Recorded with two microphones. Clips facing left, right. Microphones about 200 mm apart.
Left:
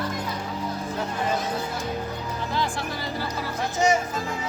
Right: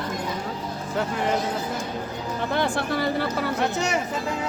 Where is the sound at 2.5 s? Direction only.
65° right (ahead or behind).